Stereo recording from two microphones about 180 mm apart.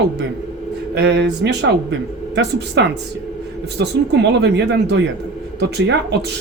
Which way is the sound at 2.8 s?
80° right.